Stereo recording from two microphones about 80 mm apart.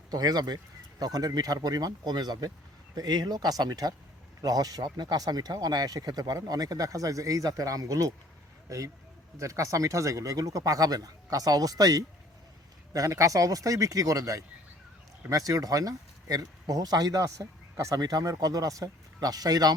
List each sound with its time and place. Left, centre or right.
0.1 s speech: right
9.4 s speech: right